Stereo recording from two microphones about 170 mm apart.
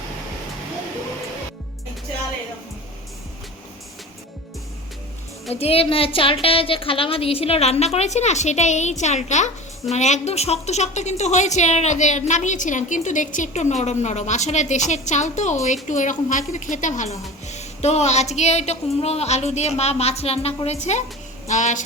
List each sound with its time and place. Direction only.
5.5 s a woman's voice: 35° left (ahead or behind)